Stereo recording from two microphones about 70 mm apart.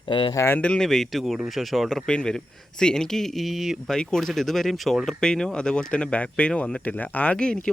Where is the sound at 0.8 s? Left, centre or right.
Centre.